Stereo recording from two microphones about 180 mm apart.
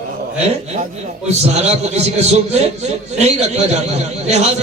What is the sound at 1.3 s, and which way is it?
A man's voice, 40° right (ahead or behind).